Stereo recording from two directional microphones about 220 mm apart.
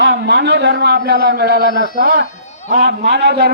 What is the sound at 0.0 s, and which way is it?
A man's voice, 50° right (ahead or behind).